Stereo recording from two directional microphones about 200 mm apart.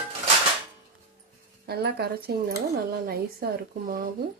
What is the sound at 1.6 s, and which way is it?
Speech, 50° right (ahead or behind).